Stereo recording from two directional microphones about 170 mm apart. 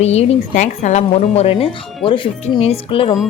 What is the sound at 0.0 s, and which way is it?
A woman's voice, 40° left (ahead or behind).